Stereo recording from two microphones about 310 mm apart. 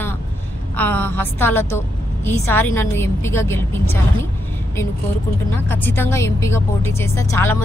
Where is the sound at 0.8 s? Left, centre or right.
Centre.